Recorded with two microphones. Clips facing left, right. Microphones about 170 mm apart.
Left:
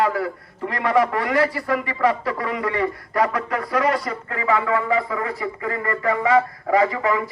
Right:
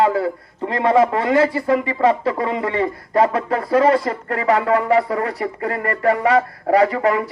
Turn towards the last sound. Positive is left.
turn(degrees=-65)  # may be behind; listen again after turning